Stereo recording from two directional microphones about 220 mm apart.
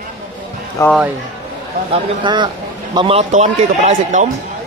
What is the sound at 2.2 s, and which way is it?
A man's voice, 20° right (ahead or behind).